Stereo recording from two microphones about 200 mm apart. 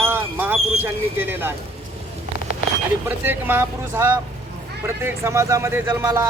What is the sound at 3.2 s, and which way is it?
Speech, 10° right (ahead or behind).